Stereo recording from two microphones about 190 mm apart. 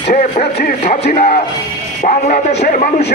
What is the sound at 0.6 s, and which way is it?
Speech, 55° left (ahead or behind).